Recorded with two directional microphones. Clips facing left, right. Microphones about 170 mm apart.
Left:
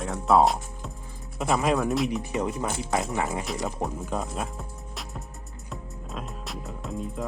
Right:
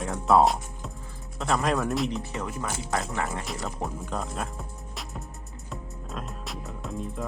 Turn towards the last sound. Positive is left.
turn(degrees=0)  # may be behind; listen again after turning